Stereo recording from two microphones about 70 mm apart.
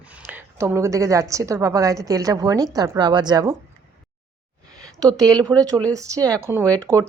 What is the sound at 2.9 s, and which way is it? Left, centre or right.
Speech, right.